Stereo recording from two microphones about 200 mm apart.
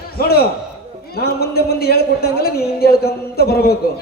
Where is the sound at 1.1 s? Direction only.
50° left (ahead or behind).